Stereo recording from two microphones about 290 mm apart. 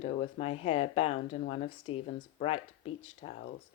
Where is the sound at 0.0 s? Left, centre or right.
Left.